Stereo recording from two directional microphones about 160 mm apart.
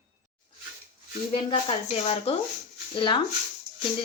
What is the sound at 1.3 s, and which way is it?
Speech, 35° left (ahead or behind).